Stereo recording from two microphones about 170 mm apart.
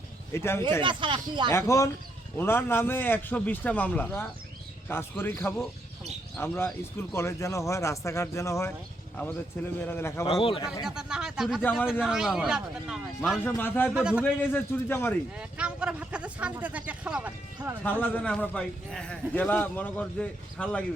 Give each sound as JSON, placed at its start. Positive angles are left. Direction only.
{"t": 0.3, "sound": "a man's voice", "side_deg": 15}
{"t": 0.8, "sound": "speech", "side_deg": -30}
{"t": 1.5, "sound": "a man's voice", "side_deg": 15}
{"t": 9.8, "sound": "a man's voice", "side_deg": 15}
{"t": 10.4, "sound": "speech", "side_deg": 30}
{"t": 10.8, "sound": "speech", "side_deg": -5}
{"t": 13.4, "sound": "a man's voice", "side_deg": 10}
{"t": 13.9, "sound": "speech", "side_deg": -5}
{"t": 14.5, "sound": "a man's voice", "side_deg": 15}
{"t": 15.4, "sound": "speech", "side_deg": -5}
{"t": 17.8, "sound": "a man's voice", "side_deg": 10}